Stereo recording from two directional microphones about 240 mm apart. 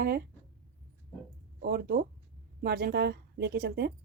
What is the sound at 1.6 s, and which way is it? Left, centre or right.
Speech, right.